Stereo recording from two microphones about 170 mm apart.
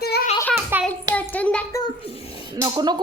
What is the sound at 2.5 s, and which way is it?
Speech, 25° right (ahead or behind).